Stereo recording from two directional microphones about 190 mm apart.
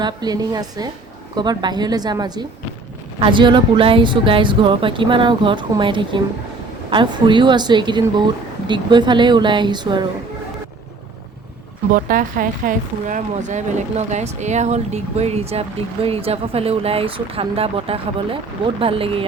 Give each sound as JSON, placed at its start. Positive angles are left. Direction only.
{"t": 0.0, "sound": "speech", "side_deg": -20}
{"t": 11.9, "sound": "speech", "side_deg": -45}